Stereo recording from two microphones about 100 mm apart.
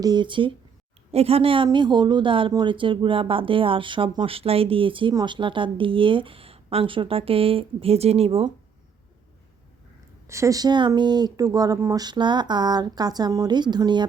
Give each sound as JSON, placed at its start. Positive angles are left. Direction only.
{"t": 0.0, "sound": "speech", "side_deg": -45}
{"t": 1.1, "sound": "speech", "side_deg": -85}
{"t": 4.4, "sound": "speech", "side_deg": -75}
{"t": 10.2, "sound": "speech", "side_deg": -30}